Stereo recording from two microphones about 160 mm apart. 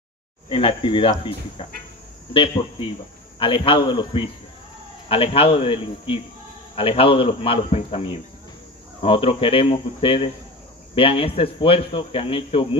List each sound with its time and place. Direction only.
0.5 s a man's voice: 35° left (ahead or behind)